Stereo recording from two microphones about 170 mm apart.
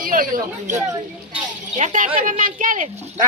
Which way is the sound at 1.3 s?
45° right (ahead or behind).